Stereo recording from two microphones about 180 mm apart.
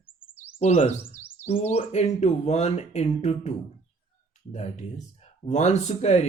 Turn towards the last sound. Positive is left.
turn(degrees=40)  # may be behind; listen again after turning